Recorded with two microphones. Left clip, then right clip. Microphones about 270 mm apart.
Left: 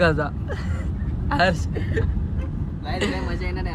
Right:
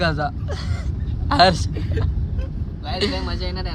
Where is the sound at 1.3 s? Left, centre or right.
Centre.